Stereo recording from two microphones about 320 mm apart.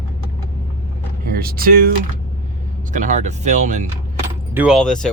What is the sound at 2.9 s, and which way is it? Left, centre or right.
Speech, right.